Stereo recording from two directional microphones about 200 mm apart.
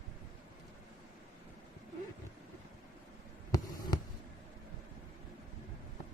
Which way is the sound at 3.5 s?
20° left (ahead or behind).